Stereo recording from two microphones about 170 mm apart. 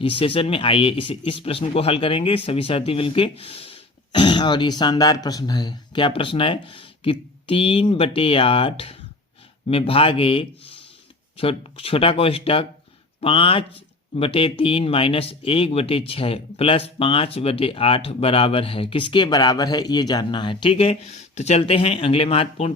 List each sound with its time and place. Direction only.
0.0 s speech: 35° left (ahead or behind)